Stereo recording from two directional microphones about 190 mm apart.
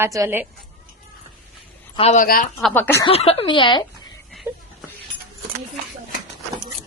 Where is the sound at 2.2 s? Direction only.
45° left (ahead or behind).